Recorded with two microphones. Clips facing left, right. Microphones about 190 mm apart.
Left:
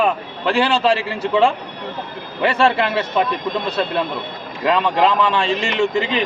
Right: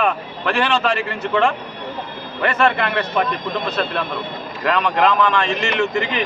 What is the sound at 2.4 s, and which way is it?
Speech, 30° left (ahead or behind).